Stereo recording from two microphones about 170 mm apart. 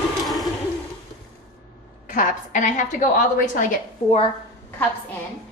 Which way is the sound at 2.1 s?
50° left (ahead or behind).